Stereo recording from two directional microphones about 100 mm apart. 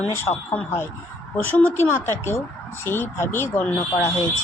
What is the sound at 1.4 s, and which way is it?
Speech, 20° left (ahead or behind).